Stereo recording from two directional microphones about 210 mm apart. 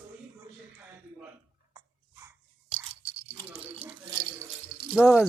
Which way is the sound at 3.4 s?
10° right (ahead or behind).